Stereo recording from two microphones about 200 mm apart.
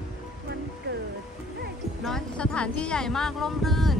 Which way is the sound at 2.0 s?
5° left (ahead or behind).